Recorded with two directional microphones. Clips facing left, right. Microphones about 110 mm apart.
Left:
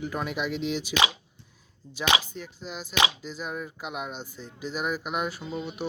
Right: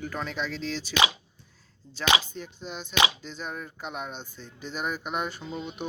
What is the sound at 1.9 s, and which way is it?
Speech, 10° left (ahead or behind).